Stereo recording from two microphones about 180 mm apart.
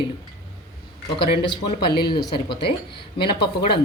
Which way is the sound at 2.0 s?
25° left (ahead or behind).